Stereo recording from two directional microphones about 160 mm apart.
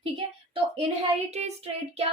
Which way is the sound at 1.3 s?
40° right (ahead or behind).